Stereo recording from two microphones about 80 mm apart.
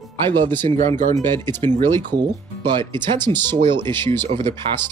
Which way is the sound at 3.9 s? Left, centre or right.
Left.